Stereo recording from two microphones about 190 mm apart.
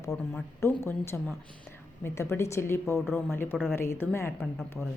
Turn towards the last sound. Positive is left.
turn(degrees=5)  # may be behind; listen again after turning